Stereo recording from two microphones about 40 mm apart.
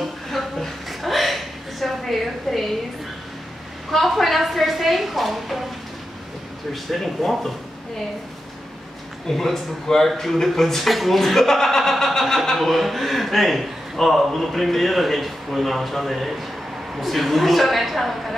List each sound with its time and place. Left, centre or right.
0.0 s a sound: centre
3.9 s a man's voice: centre
6.7 s a man's voice: centre
9.3 s a man's voice: centre